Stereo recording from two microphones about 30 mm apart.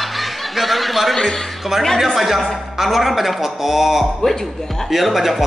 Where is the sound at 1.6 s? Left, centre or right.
Centre.